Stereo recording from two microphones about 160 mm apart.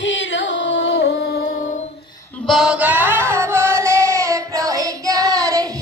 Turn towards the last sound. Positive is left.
turn(degrees=-20)  # may be behind; listen again after turning